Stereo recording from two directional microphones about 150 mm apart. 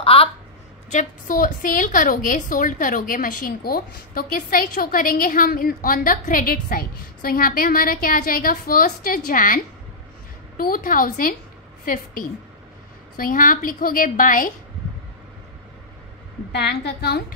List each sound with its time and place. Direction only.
0.0 s a sound: 40° left (ahead or behind)
0.8 s a woman's voice: 60° left (ahead or behind)
10.6 s a woman's voice: 70° left (ahead or behind)
16.5 s a woman's voice: 90° left